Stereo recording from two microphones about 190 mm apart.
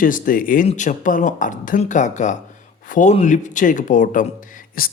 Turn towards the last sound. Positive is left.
turn(degrees=45)  # may be behind; listen again after turning